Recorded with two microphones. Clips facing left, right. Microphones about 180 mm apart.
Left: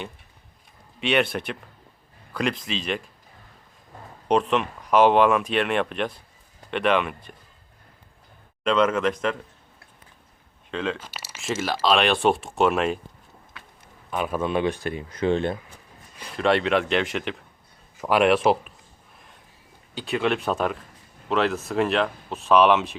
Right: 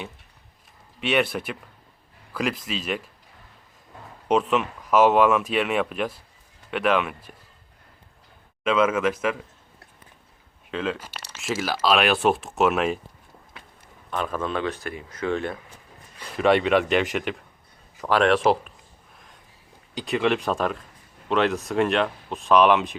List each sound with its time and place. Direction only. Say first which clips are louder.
0.9 s speech: even; centre (ahead or behind)
4.3 s speech: even; 5° right (ahead or behind)
8.6 s speech: even; 5° right (ahead or behind)
10.7 s speech: even; 5° right (ahead or behind)
14.1 s speech: left 2 dB; 10° left (ahead or behind); by 15.5 s 25° left (ahead or behind)
16.4 s speech: right 2 dB; 5° right (ahead or behind)
18.0 s speech: left 1 dB; 10° left (ahead or behind)
20.1 s speech: right 1 dB; centre (ahead or behind)